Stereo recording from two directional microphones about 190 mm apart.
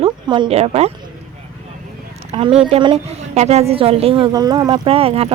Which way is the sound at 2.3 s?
30° right (ahead or behind).